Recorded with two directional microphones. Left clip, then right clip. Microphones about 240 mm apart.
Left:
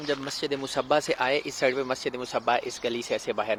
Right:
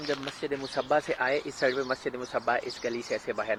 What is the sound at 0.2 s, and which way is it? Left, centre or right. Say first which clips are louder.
Speech: left 3 dB; centre.